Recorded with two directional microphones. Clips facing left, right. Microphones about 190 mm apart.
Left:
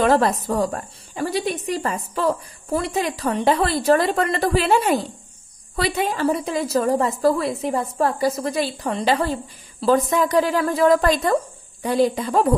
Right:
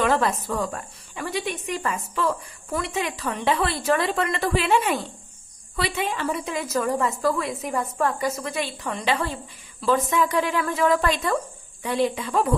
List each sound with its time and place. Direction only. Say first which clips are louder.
0.0 s a woman's voice: left 5 dB; 35° left (ahead or behind)